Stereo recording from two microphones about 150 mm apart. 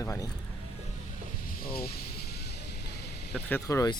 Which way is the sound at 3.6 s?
25° left (ahead or behind).